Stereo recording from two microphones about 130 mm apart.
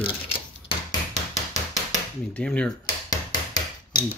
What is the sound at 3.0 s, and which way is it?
Hammer, 30° left (ahead or behind).